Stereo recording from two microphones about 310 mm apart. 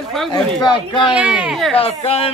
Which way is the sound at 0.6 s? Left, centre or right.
Centre.